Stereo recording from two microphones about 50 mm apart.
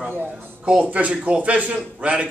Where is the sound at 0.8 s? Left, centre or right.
Right.